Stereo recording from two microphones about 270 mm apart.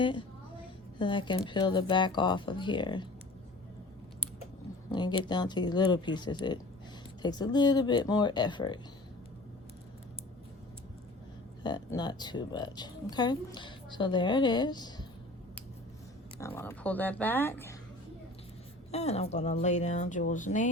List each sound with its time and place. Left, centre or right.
0.0 s speech: centre
4.9 s speech: centre
11.6 s speech: centre
16.4 s speech: centre
18.9 s speech: left